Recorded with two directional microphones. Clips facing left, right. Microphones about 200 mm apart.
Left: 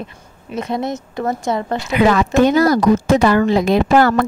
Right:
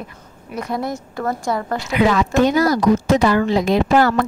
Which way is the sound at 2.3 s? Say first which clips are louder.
Left 3 dB; 55° left (ahead or behind).